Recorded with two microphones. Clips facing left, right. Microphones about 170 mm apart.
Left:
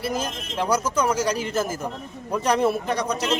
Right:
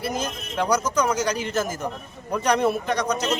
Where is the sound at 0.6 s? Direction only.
5° left (ahead or behind).